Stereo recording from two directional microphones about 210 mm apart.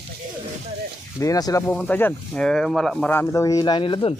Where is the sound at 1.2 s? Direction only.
15° left (ahead or behind).